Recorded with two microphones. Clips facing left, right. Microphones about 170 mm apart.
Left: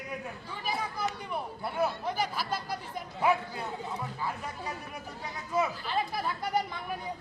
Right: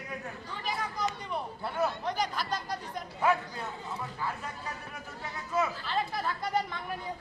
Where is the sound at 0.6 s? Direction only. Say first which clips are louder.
Even; 10° left (ahead or behind).